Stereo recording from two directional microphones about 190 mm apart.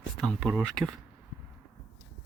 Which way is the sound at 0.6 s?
Centre (ahead or behind).